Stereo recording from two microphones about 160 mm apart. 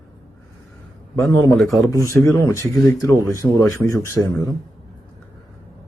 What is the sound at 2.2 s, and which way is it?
Speech, 15° left (ahead or behind).